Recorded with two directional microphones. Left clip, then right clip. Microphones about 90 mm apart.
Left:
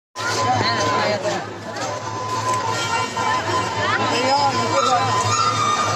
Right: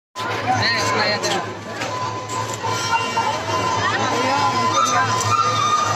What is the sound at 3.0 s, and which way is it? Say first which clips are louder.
Music: even; 35° left (ahead or behind).